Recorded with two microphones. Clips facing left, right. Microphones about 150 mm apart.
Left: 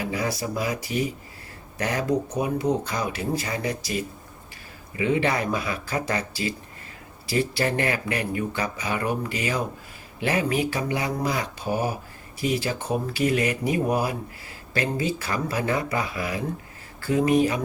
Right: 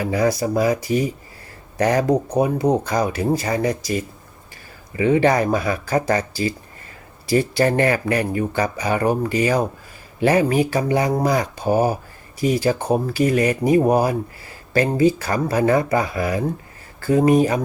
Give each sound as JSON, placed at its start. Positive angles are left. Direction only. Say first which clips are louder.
{"t": 0.0, "sound": "speech", "louder": "right 8 dB", "side_deg": -40}
{"t": 4.9, "sound": "speech", "louder": "right 7 dB", "side_deg": -40}